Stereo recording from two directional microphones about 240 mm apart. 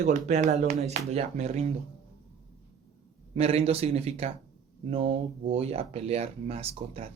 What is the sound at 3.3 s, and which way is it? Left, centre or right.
Speech, right.